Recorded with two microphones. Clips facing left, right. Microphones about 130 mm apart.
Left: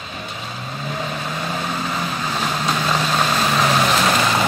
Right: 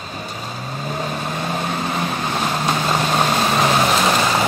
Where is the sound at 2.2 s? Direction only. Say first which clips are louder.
Right 1 dB; 10° right (ahead or behind).